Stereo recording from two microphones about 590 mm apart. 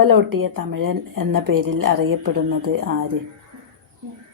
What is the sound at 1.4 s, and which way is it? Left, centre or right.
A woman's voice, right.